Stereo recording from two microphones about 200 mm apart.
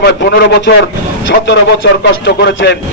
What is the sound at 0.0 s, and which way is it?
Speech, 55° left (ahead or behind).